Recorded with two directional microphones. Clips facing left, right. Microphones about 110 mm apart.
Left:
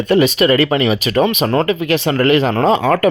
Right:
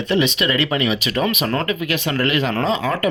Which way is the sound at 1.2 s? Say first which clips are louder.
Left 6 dB; 25° left (ahead or behind).